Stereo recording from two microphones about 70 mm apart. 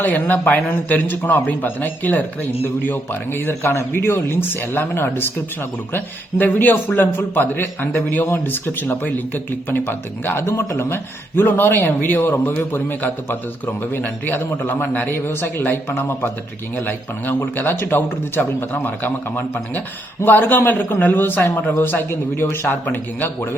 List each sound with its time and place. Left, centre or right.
0.0 s a man's voice: left
10.8 s a man's voice: left